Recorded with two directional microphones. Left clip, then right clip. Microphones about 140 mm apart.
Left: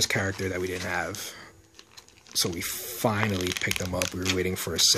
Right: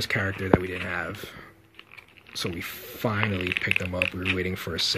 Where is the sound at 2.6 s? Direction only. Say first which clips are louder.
Left 2 dB; 50° left (ahead or behind); by 3.6 s 80° left.